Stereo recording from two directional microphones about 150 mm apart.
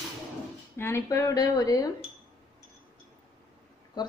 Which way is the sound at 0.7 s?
15° left (ahead or behind).